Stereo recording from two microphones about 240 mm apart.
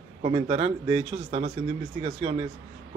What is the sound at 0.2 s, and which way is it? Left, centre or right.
A man's voice, right.